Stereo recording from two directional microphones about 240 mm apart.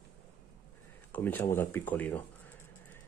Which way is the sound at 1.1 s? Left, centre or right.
Centre.